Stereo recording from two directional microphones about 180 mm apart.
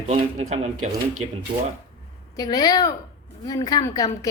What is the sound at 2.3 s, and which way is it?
A woman's voice, 20° left (ahead or behind).